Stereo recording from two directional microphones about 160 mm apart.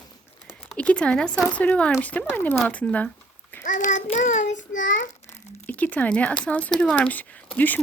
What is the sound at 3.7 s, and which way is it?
Child singing, 50° left (ahead or behind).